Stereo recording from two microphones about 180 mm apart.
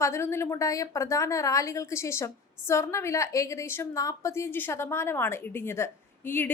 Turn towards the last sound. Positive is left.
turn(degrees=10)  # may be behind; listen again after turning